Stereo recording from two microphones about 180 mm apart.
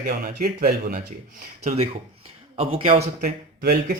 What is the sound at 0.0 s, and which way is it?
Speech, 55° right (ahead or behind).